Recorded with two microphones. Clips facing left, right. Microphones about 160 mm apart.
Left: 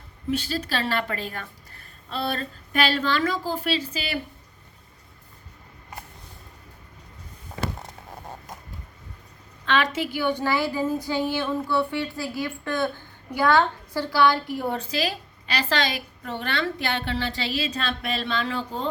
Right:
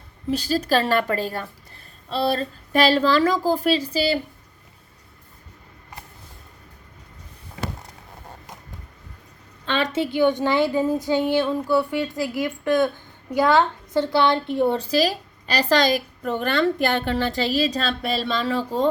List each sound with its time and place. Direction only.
0.3 s a woman's voice: 40° right (ahead or behind)
9.6 s a woman's voice: 30° right (ahead or behind)